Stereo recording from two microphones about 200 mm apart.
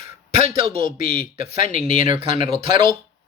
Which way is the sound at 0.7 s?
45° left (ahead or behind).